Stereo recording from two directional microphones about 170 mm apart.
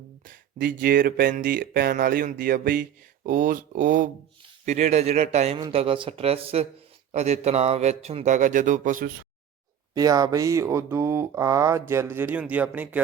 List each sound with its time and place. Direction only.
0.3 s a man's voice: 55° right (ahead or behind)
9.9 s speech: 20° right (ahead or behind)